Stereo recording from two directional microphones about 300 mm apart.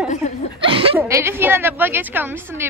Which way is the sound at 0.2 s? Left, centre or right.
Left.